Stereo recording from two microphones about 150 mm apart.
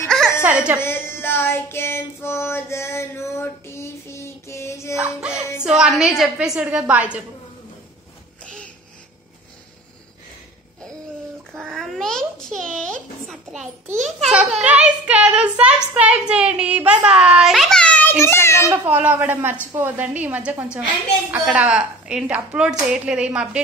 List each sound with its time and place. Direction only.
0.4 s crying: 10° right (ahead or behind)
0.7 s child singing: 15° left (ahead or behind)
4.9 s a child's voice: 5° right (ahead or behind)
11.5 s a child's voice: centre (ahead or behind); by 18.7 s 15° left (ahead or behind)
18.7 s speech: 10° right (ahead or behind)